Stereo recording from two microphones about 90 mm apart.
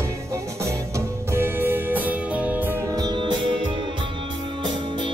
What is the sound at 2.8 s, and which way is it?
Music, 45° right (ahead or behind).